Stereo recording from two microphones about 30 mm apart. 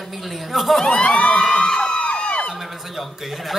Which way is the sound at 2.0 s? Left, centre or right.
Left.